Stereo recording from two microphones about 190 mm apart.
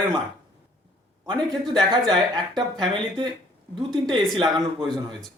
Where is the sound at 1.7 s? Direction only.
25° right (ahead or behind).